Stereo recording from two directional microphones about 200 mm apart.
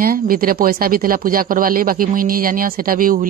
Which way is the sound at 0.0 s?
45° right (ahead or behind).